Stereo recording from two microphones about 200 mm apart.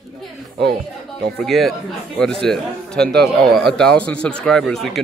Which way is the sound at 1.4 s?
Centre (ahead or behind).